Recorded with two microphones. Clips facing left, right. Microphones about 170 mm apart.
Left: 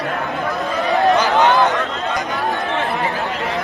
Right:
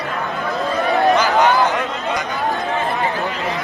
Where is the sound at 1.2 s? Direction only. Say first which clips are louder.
Left 1 dB; 20° left (ahead or behind).